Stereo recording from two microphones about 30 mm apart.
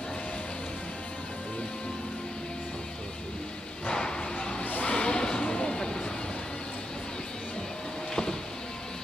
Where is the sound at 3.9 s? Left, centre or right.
Left.